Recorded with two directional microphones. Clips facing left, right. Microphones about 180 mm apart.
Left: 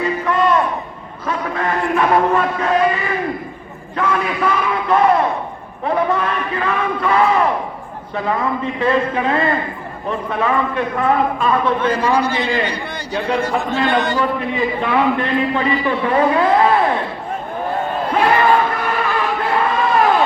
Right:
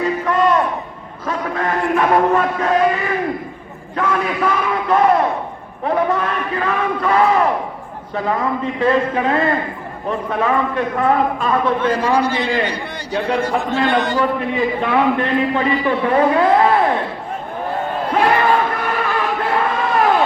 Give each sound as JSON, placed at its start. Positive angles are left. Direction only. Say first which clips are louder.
{"t": 0.0, "sound": "crowd", "louder": "right 1 dB", "side_deg": -45}
{"t": 1.3, "sound": "a man's voice", "louder": "even", "side_deg": -45}
{"t": 18.2, "sound": "crowd", "louder": "left 1 dB", "side_deg": -50}